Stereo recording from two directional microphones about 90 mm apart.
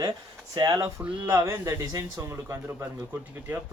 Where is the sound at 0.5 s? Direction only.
45° right (ahead or behind).